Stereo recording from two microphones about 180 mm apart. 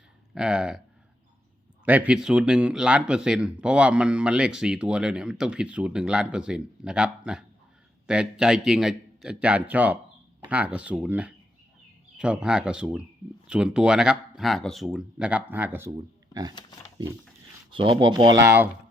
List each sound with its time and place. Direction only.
0.3 s speech: 5° right (ahead or behind)
1.8 s speech: 10° right (ahead or behind)
17.7 s speech: 30° right (ahead or behind)